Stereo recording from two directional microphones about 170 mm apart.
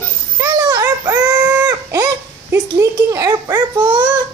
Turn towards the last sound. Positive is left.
turn(degrees=-25)  # may be behind; listen again after turning